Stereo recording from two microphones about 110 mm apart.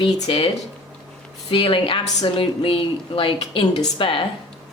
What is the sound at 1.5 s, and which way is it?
A woman's voice, 55° left (ahead or behind).